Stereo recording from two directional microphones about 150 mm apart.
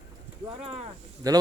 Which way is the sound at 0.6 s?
40° right (ahead or behind).